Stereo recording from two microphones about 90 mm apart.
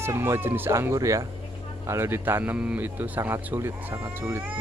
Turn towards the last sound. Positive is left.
turn(degrees=-30)  # may be behind; listen again after turning